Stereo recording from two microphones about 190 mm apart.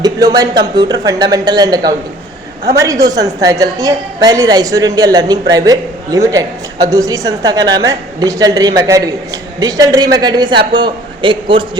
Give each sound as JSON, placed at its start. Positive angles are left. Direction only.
{"t": 0.0, "sound": "a woman's voice", "side_deg": -20}